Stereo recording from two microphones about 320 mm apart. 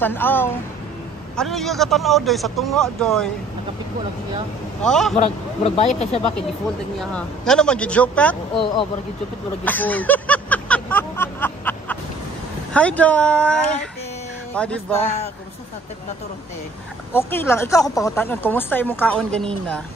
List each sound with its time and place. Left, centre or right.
0.0 s speech: centre
4.8 s speech: centre
5.1 s speech: centre
7.0 s speech: centre
9.7 s a sound: centre
12.7 s speech: centre
17.1 s speech: centre